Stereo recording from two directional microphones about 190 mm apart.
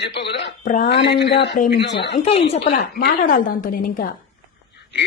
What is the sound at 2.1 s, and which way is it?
Speech, 30° left (ahead or behind).